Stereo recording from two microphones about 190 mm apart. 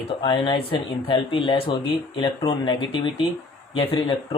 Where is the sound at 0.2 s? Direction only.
25° left (ahead or behind).